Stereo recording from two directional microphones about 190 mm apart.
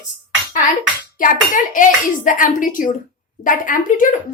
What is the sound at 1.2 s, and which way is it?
A child's voice, 45° left (ahead or behind).